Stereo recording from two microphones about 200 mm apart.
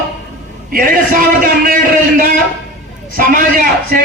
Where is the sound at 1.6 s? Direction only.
45° right (ahead or behind).